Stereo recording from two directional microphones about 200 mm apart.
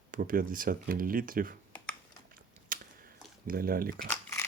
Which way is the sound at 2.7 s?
45° right (ahead or behind).